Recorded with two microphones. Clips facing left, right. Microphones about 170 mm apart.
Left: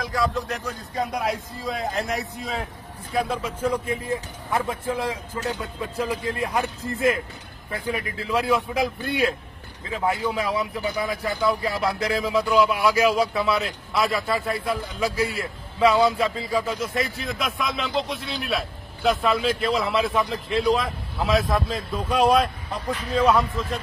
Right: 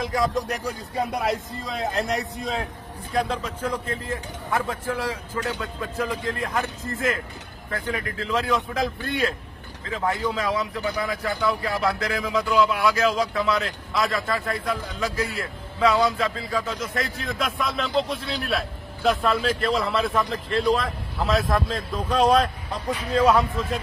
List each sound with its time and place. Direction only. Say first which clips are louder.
0.0 s speech: right 1 dB; 20° right (ahead or behind)
0.9 s a man's voice: right 1 dB; centre (ahead or behind)